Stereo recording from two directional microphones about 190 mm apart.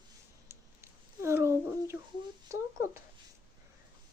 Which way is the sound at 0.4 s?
15° right (ahead or behind).